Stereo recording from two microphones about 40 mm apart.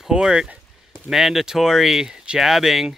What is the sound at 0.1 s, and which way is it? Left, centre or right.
Speech, centre.